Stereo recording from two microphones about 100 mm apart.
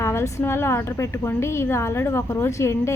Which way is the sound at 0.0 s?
30° left (ahead or behind).